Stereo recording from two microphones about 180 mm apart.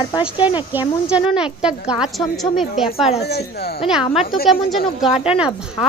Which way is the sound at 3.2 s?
65° left (ahead or behind).